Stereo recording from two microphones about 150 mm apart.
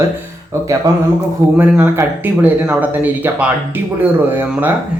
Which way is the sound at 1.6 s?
15° right (ahead or behind).